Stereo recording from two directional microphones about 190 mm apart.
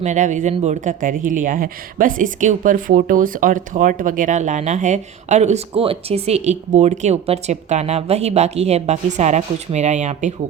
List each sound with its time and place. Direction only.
0.0 s speech: 40° right (ahead or behind)